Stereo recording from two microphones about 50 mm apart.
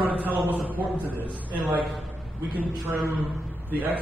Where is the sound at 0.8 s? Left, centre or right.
Right.